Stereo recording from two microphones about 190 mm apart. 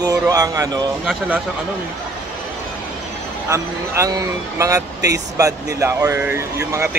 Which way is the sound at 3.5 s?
15° right (ahead or behind).